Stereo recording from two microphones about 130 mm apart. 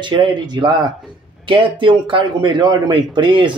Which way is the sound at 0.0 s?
35° right (ahead or behind).